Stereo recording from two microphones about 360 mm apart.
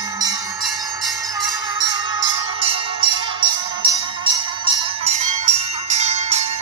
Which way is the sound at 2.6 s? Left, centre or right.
Centre.